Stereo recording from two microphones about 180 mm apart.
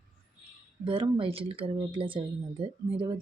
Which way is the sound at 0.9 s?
30° right (ahead or behind).